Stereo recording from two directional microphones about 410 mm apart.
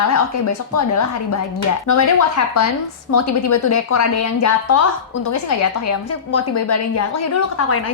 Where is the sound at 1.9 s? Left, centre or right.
Left.